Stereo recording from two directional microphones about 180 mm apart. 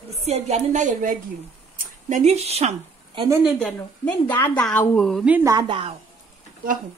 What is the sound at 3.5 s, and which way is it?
A woman's voice, 5° left (ahead or behind).